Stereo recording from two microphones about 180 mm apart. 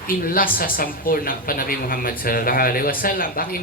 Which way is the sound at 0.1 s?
55° left (ahead or behind).